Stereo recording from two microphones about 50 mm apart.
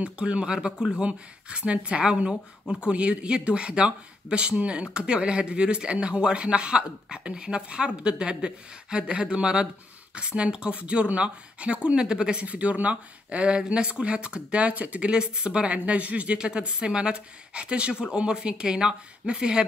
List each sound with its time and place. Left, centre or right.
0.0 s speech: right
12.4 s speech: right